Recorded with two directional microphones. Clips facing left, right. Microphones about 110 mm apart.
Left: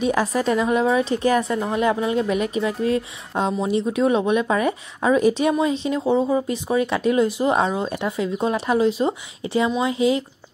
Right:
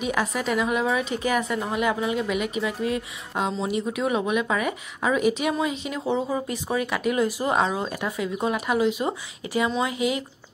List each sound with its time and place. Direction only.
0.0 s a woman's voice: 35° left (ahead or behind)